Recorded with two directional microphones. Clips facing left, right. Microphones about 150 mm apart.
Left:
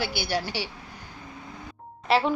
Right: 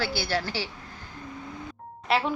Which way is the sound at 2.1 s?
Centre (ahead or behind).